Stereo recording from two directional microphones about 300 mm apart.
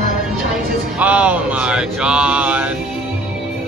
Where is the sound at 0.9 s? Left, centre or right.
Centre.